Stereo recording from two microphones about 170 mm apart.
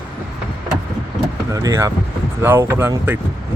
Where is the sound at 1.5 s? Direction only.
20° right (ahead or behind).